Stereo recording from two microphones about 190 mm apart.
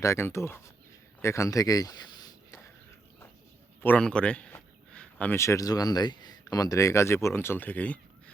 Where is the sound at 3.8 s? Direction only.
5° left (ahead or behind).